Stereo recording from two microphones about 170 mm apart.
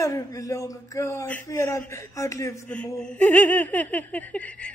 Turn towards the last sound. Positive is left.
turn(degrees=5)  # may be behind; listen again after turning